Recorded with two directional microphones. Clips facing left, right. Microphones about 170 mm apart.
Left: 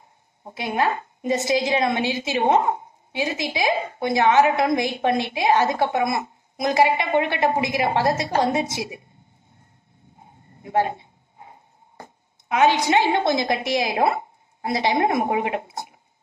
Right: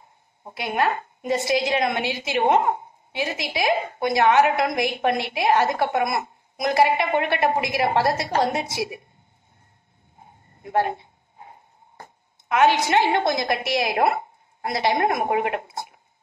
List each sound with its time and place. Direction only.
0.6 s a woman's voice: 25° left (ahead or behind)
10.6 s speech: 20° left (ahead or behind)
12.4 s a woman's voice: 20° left (ahead or behind)